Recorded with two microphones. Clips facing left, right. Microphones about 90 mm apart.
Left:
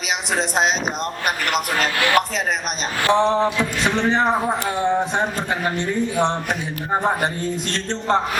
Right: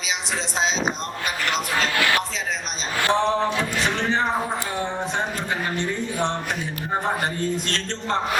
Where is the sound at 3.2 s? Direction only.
15° left (ahead or behind).